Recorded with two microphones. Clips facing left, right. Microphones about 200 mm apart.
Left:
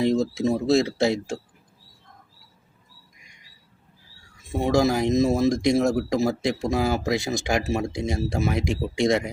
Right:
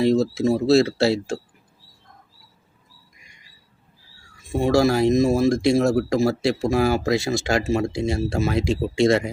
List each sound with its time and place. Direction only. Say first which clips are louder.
0.0 s speech: right 3 dB; 15° left (ahead or behind)
4.4 s speech: right 3 dB; 20° left (ahead or behind)